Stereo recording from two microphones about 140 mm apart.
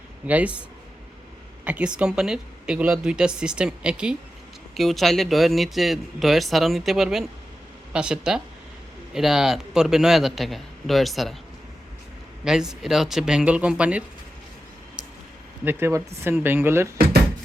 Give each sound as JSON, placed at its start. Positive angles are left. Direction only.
{"t": 0.3, "sound": "speech", "side_deg": -10}
{"t": 1.6, "sound": "speech", "side_deg": -10}
{"t": 12.5, "sound": "speech", "side_deg": -5}
{"t": 15.6, "sound": "speech", "side_deg": -15}